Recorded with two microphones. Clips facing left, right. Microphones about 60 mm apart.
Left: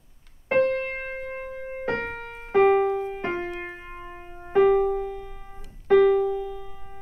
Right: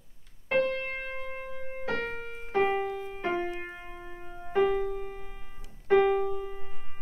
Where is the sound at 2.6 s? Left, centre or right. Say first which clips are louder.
Left 9 dB; left.